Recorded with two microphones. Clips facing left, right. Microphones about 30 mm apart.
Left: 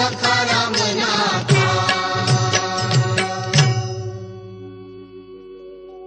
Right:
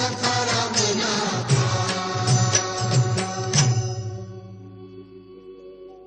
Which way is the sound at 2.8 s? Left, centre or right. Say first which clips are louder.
Left 5 dB; left.